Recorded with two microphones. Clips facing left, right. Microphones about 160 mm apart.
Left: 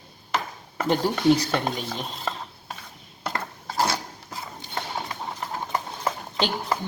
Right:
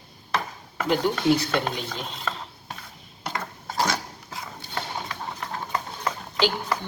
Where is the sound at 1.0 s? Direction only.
35° left (ahead or behind).